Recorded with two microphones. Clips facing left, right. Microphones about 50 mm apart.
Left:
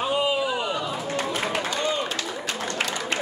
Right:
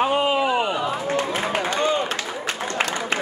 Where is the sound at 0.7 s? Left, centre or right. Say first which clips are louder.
Right 4 dB; right.